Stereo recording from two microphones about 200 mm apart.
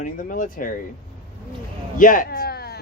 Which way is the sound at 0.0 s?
45° left (ahead or behind).